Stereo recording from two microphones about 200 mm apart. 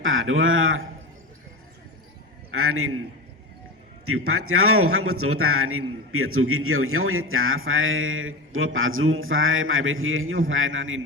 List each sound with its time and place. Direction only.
0.0 s speech: 80° right
2.5 s a man's voice: 90° right
4.0 s a man's voice: 90° right